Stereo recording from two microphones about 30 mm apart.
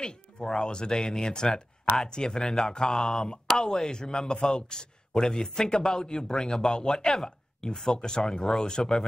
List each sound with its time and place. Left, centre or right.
0.0 s a man's voice: left